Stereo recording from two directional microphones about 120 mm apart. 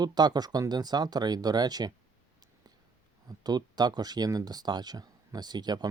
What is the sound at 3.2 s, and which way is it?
Speech, 35° right (ahead or behind).